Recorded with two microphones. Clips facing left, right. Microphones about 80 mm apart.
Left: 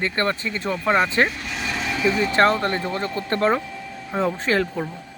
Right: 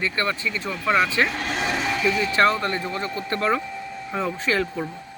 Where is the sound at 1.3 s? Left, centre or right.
Right.